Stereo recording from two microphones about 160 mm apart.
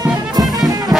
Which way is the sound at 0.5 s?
25° right (ahead or behind).